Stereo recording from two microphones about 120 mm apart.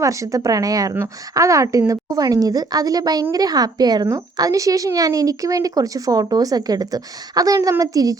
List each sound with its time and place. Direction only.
0.0 s a woman's voice: 25° right (ahead or behind)